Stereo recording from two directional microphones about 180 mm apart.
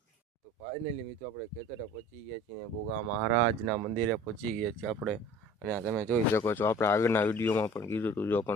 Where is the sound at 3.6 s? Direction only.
Centre (ahead or behind).